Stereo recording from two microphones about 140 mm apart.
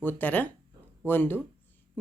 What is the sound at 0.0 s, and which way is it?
Speech, 15° left (ahead or behind).